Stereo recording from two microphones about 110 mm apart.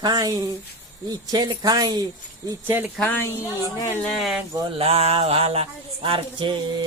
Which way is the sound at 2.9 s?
15° left (ahead or behind).